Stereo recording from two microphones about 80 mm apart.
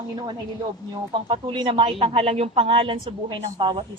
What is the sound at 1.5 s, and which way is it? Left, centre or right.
A woman's voice, right.